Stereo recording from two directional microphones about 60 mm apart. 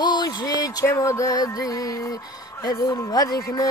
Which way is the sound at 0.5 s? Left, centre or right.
Left.